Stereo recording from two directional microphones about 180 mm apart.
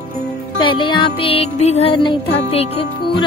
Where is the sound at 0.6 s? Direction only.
25° left (ahead or behind).